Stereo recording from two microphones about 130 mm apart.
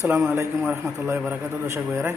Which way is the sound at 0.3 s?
15° right (ahead or behind).